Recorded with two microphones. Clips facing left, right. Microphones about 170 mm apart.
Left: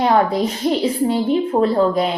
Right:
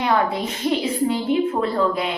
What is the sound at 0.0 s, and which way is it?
A woman's voice, 35° left (ahead or behind).